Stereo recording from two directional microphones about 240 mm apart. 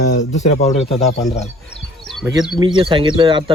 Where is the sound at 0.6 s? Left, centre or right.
Left.